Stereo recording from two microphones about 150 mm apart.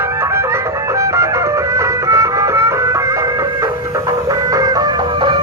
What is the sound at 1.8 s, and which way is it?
Music, 20° right (ahead or behind).